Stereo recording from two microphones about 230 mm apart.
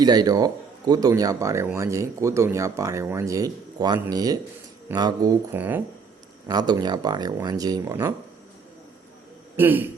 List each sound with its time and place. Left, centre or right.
0.0 s speech: centre
9.6 s speech: centre